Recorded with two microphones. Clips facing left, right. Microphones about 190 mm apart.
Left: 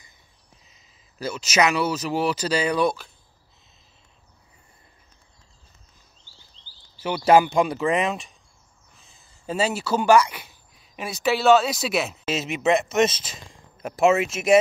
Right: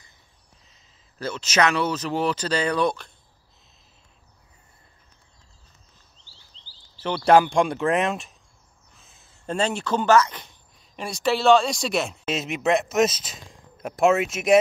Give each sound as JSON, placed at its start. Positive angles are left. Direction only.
{"t": 0.7, "sound": "speech", "side_deg": 10}
{"t": 7.0, "sound": "speech", "side_deg": 10}